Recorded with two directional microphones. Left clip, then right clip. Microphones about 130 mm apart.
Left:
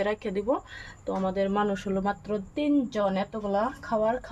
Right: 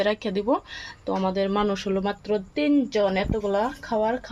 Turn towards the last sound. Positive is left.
turn(degrees=-50)  # may be behind; listen again after turning